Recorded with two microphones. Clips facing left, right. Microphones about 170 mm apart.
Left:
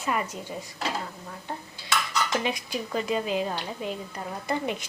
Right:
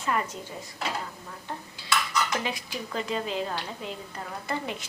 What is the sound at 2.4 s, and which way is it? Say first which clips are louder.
A woman's voice: left 3 dB; 15° left (ahead or behind).